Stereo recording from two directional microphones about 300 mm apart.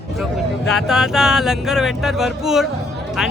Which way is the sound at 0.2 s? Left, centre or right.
Centre.